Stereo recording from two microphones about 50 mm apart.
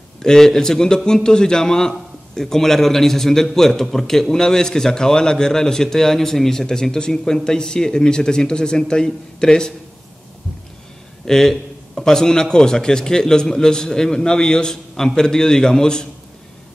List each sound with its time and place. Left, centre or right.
0.2 s a man's voice: centre
11.2 s a man's voice: centre